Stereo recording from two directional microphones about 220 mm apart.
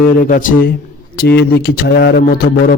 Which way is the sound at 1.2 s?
45° left (ahead or behind).